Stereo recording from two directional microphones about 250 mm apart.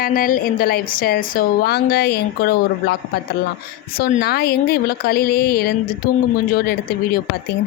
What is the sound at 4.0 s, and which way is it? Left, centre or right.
A woman's voice, left.